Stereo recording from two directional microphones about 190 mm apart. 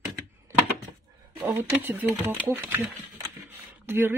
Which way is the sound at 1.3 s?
15° right (ahead or behind).